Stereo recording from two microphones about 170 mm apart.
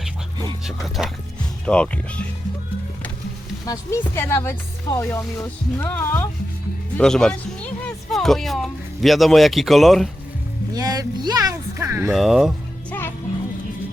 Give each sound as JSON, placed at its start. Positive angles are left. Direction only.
{"t": 0.6, "sound": "speech", "side_deg": 0}
{"t": 3.7, "sound": "speech", "side_deg": 15}
{"t": 10.8, "sound": "speech", "side_deg": -20}
{"t": 12.1, "sound": "speech", "side_deg": 0}
{"t": 12.9, "sound": "music", "side_deg": 15}